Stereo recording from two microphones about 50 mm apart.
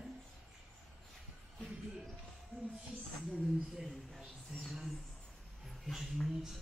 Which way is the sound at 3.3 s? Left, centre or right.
Centre.